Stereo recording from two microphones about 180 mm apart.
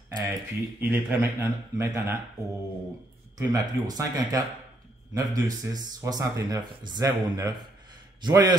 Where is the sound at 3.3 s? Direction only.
20° right (ahead or behind).